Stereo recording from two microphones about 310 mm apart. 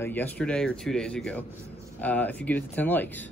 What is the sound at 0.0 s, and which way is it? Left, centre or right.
Speech, centre.